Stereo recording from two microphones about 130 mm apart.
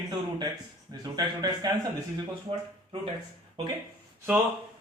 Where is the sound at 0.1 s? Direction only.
35° right (ahead or behind).